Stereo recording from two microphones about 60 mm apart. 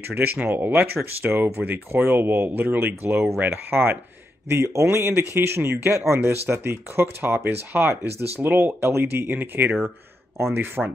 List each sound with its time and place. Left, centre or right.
0.1 s speech: right
10.8 s speech: centre